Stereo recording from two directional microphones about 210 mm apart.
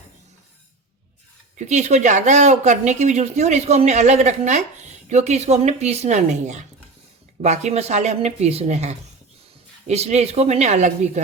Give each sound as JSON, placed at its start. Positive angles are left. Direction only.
{"t": 1.5, "sound": "speech", "side_deg": -35}